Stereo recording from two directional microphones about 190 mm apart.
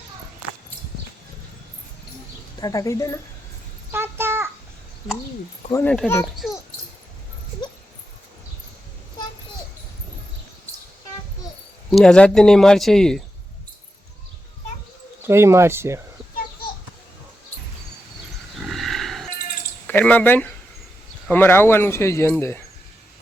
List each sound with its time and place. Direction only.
2.6 s a man's voice: 20° left (ahead or behind)
3.9 s a sound: 10° right (ahead or behind)
5.7 s a man's voice: 5° left (ahead or behind)
6.4 s dog: centre (ahead or behind)
11.9 s speech: centre (ahead or behind)
15.3 s speech: 15° right (ahead or behind)
18.5 s a sound: centre (ahead or behind)
19.9 s a man's voice: 10° left (ahead or behind)